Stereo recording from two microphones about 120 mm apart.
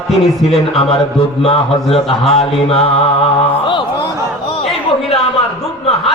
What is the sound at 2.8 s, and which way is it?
Music, 60° left (ahead or behind).